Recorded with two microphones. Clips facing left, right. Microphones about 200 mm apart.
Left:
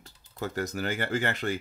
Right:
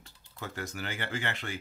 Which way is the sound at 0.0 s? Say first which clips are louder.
Left 7 dB; 40° left (ahead or behind).